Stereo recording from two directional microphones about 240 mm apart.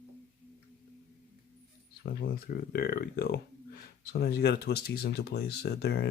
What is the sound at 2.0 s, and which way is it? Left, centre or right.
Speech, left.